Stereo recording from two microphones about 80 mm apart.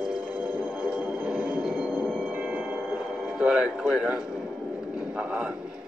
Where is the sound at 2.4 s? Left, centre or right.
Centre.